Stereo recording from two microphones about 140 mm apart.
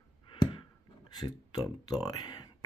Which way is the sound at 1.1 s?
30° left (ahead or behind).